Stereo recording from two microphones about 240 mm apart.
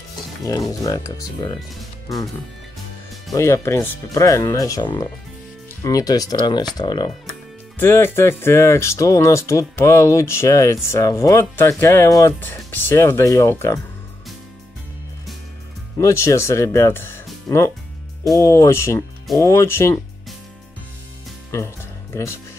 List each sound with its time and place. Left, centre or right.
0.4 s speech: centre
3.3 s speech: centre
16.0 s speech: centre
21.5 s music: centre